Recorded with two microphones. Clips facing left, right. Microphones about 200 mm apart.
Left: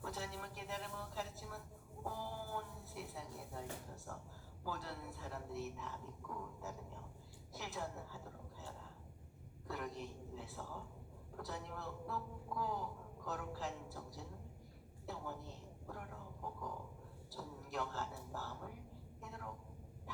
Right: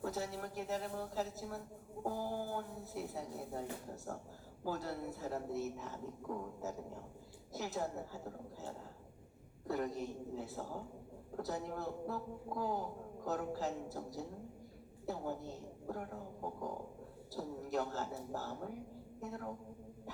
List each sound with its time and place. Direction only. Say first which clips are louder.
0.0 s a man's voice: right 6 dB; 40° right (ahead or behind)